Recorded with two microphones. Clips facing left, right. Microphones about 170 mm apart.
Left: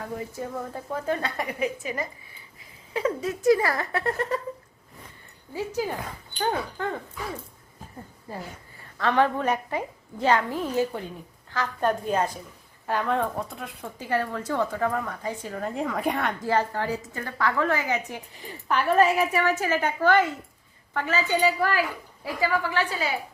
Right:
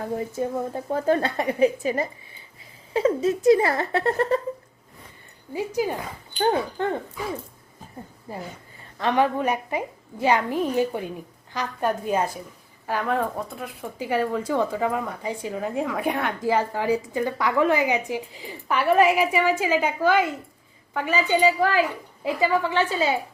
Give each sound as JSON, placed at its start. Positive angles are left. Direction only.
{"t": 0.0, "sound": "a woman's voice", "side_deg": -30}
{"t": 5.8, "sound": "a woman's voice", "side_deg": -15}
{"t": 6.4, "sound": "a woman's voice", "side_deg": -25}
{"t": 8.3, "sound": "a woman's voice", "side_deg": -15}
{"t": 13.8, "sound": "a woman's voice", "side_deg": -10}
{"t": 15.7, "sound": "a woman's voice", "side_deg": 0}